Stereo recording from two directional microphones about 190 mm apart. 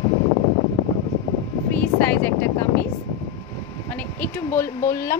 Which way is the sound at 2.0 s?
10° left (ahead or behind).